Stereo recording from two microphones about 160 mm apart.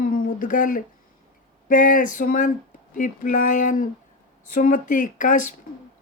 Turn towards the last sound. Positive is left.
turn(degrees=55)  # may be behind; listen again after turning